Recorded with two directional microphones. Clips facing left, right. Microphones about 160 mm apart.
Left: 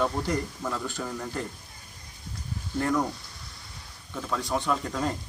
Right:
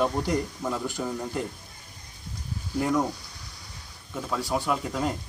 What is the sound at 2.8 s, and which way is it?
Speech, 10° right (ahead or behind).